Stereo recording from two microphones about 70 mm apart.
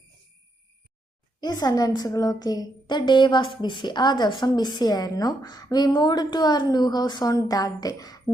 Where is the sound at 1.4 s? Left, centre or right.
Left.